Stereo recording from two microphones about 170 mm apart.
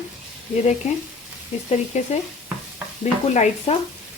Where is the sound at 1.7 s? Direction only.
40° left (ahead or behind).